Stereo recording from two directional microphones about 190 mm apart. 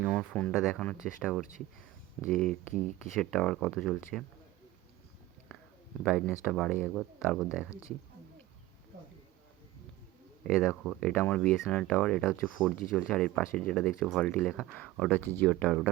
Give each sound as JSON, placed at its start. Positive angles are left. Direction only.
{"t": 0.1, "sound": "speech", "side_deg": 5}
{"t": 6.0, "sound": "speech", "side_deg": 5}
{"t": 7.7, "sound": "speech", "side_deg": 15}
{"t": 10.4, "sound": "speech", "side_deg": 0}